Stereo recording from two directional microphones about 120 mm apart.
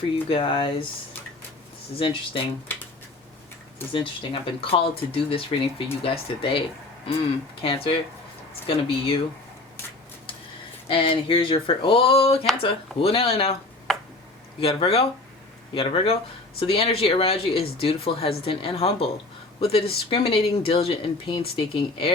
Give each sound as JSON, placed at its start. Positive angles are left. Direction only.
{"t": 0.3, "sound": "speech", "side_deg": 50}
{"t": 2.0, "sound": "speech", "side_deg": 45}
{"t": 3.9, "sound": "speech", "side_deg": 45}
{"t": 10.8, "sound": "speech", "side_deg": 50}
{"t": 13.9, "sound": "tick-tock", "side_deg": 0}
{"t": 14.6, "sound": "speech", "side_deg": 50}